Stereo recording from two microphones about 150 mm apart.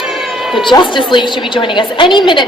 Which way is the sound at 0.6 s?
35° left (ahead or behind).